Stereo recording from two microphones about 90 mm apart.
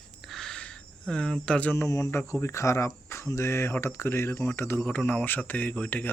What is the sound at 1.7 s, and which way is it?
Speech, 30° left (ahead or behind).